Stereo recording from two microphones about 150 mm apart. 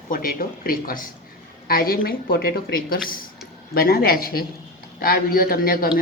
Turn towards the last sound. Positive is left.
turn(degrees=75)  # may be behind; listen again after turning